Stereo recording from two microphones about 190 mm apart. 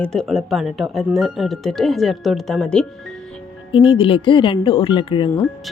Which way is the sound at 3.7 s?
25° left (ahead or behind).